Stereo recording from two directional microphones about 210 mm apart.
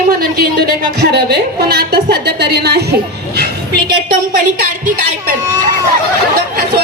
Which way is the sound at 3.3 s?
50° right (ahead or behind).